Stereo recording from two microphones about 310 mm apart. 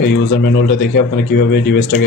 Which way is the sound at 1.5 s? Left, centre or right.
Left.